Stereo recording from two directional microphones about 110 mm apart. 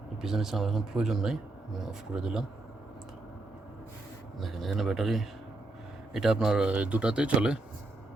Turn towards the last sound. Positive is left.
turn(degrees=-10)  # may be behind; listen again after turning